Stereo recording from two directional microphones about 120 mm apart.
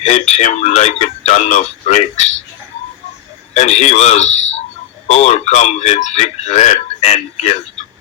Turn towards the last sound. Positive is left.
turn(degrees=70)  # may be behind; listen again after turning